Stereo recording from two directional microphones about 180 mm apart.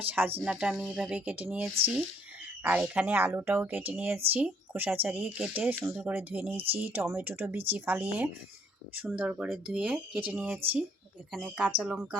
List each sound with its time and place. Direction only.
0.3 s speech: 5° right (ahead or behind)